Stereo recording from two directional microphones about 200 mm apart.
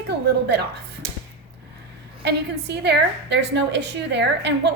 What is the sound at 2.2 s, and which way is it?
A woman's voice, 55° right (ahead or behind).